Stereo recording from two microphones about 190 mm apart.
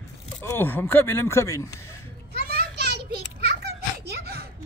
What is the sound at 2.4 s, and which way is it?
Children playing, 55° right (ahead or behind).